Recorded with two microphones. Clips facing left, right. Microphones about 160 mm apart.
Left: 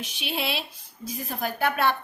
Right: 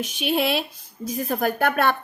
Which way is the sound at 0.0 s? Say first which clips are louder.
Right 8 dB; 50° right (ahead or behind).